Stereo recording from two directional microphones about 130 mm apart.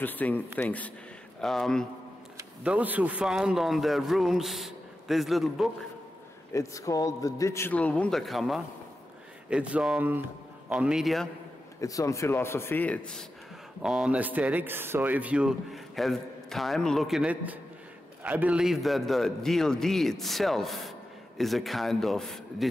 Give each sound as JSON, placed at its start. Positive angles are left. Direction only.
{"t": 0.0, "sound": "speech", "side_deg": 15}
{"t": 1.4, "sound": "speech", "side_deg": 0}
{"t": 2.6, "sound": "speech", "side_deg": -10}
{"t": 6.5, "sound": "speech", "side_deg": 25}
{"t": 7.7, "sound": "speech", "side_deg": 10}
{"t": 11.8, "sound": "speech", "side_deg": 25}
{"t": 13.8, "sound": "speech", "side_deg": -5}